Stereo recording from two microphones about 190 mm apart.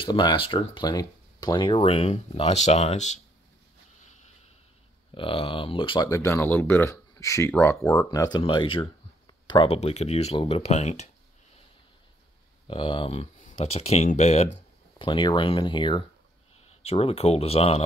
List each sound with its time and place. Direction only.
0.0 s speech: 25° left (ahead or behind)
5.1 s speech: 25° left (ahead or behind)
6.0 s speech: 15° left (ahead or behind); by 11.1 s 35° left (ahead or behind)
12.6 s speech: 25° left (ahead or behind)